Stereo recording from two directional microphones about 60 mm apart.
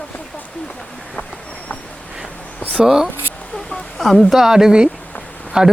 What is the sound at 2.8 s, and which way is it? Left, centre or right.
Speech, centre.